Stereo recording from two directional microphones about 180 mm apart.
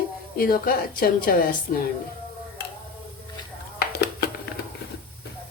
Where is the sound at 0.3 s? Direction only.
55° left (ahead or behind).